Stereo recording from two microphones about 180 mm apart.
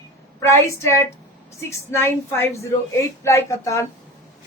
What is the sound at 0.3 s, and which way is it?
A woman's voice, 15° left (ahead or behind).